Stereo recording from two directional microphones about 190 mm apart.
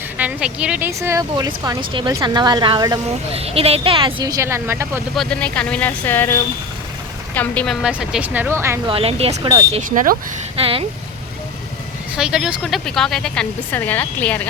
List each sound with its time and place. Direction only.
0.2 s a woman's voice: 5° right (ahead or behind)
5.1 s a woman's voice: 5° left (ahead or behind); by 8.8 s 15° right (ahead or behind)
8.9 s speech: 30° right (ahead or behind)
9.7 s speech: 45° right (ahead or behind)
10.6 s a woman's voice: 30° right (ahead or behind)
12.1 s a woman's voice: 5° right (ahead or behind)